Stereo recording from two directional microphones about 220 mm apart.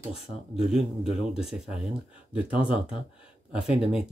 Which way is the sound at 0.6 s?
Centre (ahead or behind).